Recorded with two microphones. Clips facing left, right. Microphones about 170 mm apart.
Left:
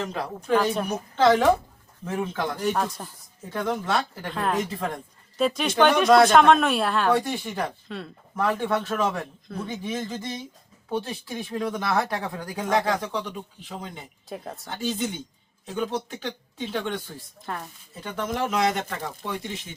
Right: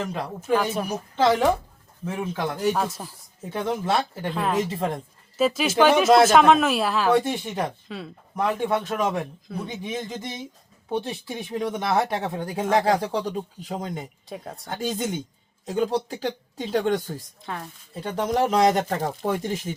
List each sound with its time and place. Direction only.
0.0 s speech: 5° right (ahead or behind)
3.5 s speech: 25° right (ahead or behind)
4.3 s speech: centre (ahead or behind)
7.1 s speech: 20° right (ahead or behind)
7.9 s speech: centre (ahead or behind)
8.4 s speech: 15° right (ahead or behind); by 14.1 s 45° right (ahead or behind)
14.3 s speech: centre (ahead or behind)
14.7 s speech: 45° right (ahead or behind)
17.4 s speech: centre (ahead or behind)
18.0 s speech: 35° right (ahead or behind)